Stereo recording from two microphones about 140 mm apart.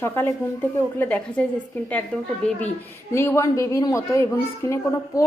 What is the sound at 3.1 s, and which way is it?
A child's voice, 20° left (ahead or behind).